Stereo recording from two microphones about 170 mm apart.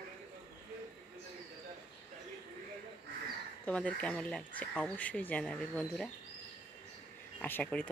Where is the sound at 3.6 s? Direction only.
5° left (ahead or behind).